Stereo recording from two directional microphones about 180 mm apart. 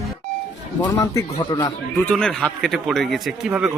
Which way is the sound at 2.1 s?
5° left (ahead or behind).